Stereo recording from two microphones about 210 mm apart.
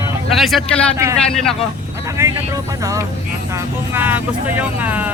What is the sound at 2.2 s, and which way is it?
Speech, 15° right (ahead or behind).